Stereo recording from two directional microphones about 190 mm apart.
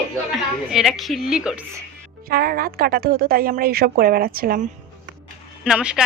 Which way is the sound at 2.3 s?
50° right (ahead or behind).